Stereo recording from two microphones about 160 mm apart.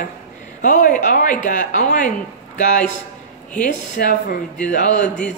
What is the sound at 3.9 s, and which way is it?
Speech, 60° left (ahead or behind).